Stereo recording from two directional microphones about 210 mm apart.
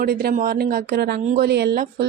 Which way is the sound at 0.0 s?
45° right (ahead or behind).